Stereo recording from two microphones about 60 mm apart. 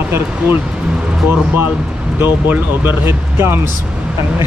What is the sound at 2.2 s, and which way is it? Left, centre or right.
Speech, right.